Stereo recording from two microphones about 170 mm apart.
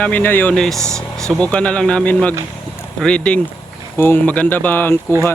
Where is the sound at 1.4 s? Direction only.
5° left (ahead or behind).